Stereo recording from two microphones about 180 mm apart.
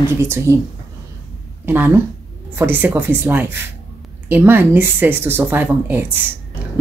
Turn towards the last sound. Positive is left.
turn(degrees=-10)  # may be behind; listen again after turning